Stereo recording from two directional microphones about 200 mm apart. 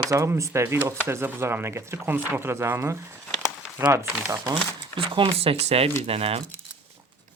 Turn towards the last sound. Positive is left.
turn(degrees=-30)  # may be behind; listen again after turning